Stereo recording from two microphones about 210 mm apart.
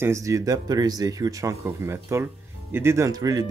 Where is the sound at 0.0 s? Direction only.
15° right (ahead or behind).